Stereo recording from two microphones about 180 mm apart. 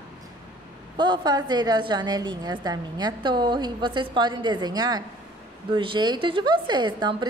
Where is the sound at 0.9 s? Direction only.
25° right (ahead or behind).